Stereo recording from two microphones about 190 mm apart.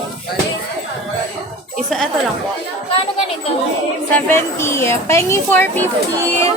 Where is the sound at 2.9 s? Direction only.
30° left (ahead or behind).